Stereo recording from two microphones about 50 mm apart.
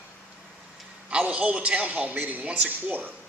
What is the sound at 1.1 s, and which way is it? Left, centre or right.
Speech, right.